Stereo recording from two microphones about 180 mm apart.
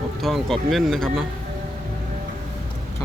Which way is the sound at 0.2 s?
Centre (ahead or behind).